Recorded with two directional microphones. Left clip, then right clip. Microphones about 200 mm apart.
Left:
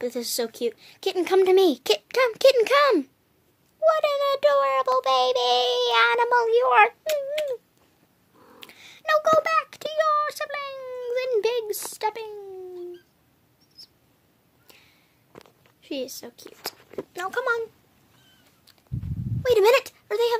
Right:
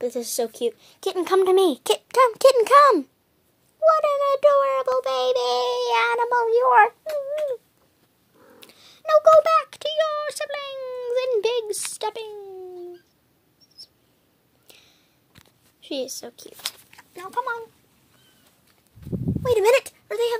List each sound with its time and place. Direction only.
0.0 s a child's voice: 5° left (ahead or behind)
7.1 s a sound: 20° left (ahead or behind)
8.5 s speech: 10° left (ahead or behind)
13.8 s a sound: centre (ahead or behind)
15.8 s a child's voice: 5° right (ahead or behind)
17.1 s speech: 30° left (ahead or behind)
19.6 s a child's voice: centre (ahead or behind)